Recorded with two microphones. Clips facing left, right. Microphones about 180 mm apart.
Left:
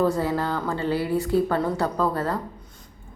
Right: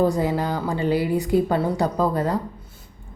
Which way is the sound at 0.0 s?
15° right (ahead or behind).